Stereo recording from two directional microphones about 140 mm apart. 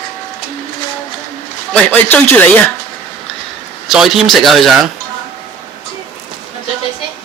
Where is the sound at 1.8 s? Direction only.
15° left (ahead or behind).